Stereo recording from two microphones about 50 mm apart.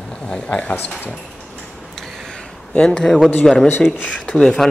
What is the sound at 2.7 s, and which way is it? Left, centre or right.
Speech, centre.